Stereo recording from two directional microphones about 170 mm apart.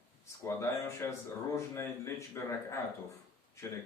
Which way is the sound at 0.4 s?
15° left (ahead or behind).